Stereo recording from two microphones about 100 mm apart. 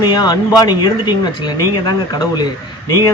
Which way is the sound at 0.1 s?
45° left (ahead or behind).